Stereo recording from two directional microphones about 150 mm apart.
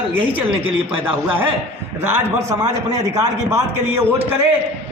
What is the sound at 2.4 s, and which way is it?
A man's voice, 20° right (ahead or behind).